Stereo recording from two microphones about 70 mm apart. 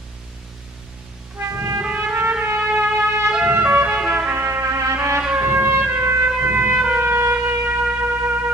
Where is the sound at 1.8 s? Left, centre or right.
Right.